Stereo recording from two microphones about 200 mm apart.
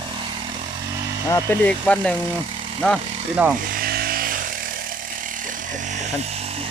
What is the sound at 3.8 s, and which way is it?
Electric shaver, 50° right (ahead or behind).